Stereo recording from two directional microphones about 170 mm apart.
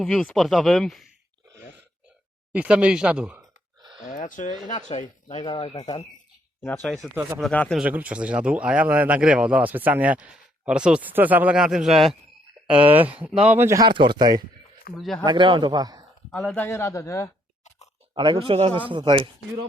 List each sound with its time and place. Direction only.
0.0 s speech: 5° left (ahead or behind)
2.5 s speech: 5° right (ahead or behind)
4.0 s speech: 50° left (ahead or behind); by 5.7 s 35° left (ahead or behind)
6.6 s speech: 15° left (ahead or behind)
6.8 s speech: centre (ahead or behind)
7.8 s speech: 10° right (ahead or behind)
13.8 s a man's voice: 30° right (ahead or behind)
14.9 s speech: centre (ahead or behind)
15.2 s a man's voice: 30° right (ahead or behind)
16.3 s speech: 5° left (ahead or behind)
16.6 s speech: 15° left (ahead or behind)
18.1 s a man's voice: 30° right (ahead or behind)